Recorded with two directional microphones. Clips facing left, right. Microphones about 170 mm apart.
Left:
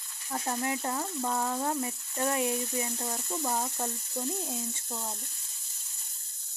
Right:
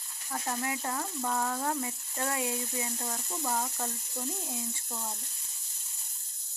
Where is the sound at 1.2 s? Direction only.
10° left (ahead or behind).